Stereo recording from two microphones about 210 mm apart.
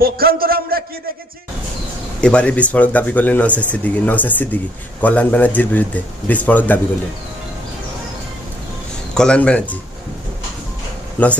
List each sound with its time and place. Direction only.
0.0 s a man's voice: 45° right (ahead or behind)
2.2 s speech: 5° left (ahead or behind)
9.1 s speech: 5° left (ahead or behind)
11.2 s speech: 10° left (ahead or behind)